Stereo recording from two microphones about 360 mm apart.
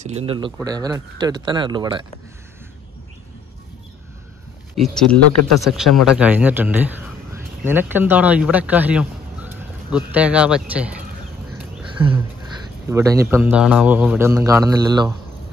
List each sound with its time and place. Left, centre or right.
0.0 s a man's voice: centre
4.7 s speech: centre
11.5 s a sound: centre
12.8 s a man's voice: centre